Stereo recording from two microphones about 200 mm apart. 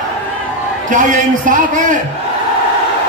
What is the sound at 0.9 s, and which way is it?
Speech, 40° right (ahead or behind).